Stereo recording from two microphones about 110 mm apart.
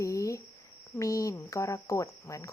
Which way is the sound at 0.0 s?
30° left (ahead or behind).